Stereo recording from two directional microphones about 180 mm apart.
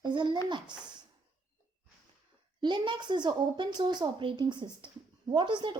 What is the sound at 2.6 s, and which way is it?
A woman's voice, 25° right (ahead or behind).